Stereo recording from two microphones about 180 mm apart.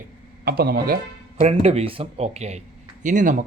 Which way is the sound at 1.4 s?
35° right (ahead or behind).